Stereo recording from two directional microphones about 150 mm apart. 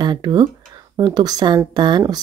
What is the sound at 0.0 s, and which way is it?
Speech, 30° right (ahead or behind).